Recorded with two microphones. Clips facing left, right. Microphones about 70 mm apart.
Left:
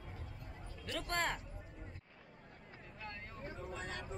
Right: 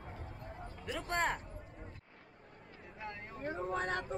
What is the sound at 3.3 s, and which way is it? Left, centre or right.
Speech, right.